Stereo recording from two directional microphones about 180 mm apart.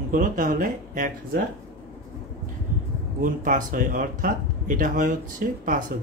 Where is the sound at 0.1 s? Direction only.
50° right (ahead or behind).